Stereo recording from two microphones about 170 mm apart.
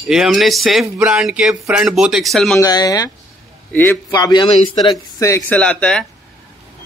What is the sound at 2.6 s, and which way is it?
Speech, 20° left (ahead or behind).